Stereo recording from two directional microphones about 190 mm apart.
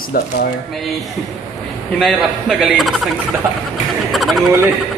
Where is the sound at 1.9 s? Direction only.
Centre (ahead or behind).